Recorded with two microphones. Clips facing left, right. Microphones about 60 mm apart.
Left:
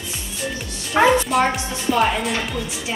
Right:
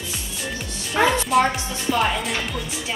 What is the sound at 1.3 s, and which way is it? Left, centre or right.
Speech, centre.